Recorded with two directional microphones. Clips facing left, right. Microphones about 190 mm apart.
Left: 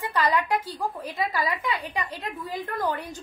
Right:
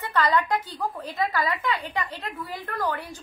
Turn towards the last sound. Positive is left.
turn(degrees=20)  # may be behind; listen again after turning